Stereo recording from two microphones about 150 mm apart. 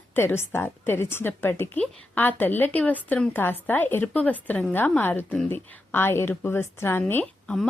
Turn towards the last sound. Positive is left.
turn(degrees=15)  # may be behind; listen again after turning